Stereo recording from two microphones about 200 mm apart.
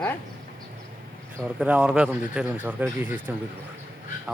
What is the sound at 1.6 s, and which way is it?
Speech, 5° right (ahead or behind).